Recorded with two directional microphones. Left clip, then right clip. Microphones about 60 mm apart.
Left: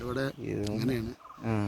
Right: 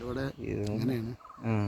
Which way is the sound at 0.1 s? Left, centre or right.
Right.